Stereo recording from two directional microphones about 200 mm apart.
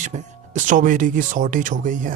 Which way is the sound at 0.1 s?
40° right (ahead or behind).